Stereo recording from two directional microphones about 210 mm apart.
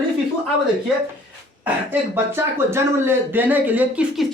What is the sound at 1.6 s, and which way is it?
Speech, 10° right (ahead or behind).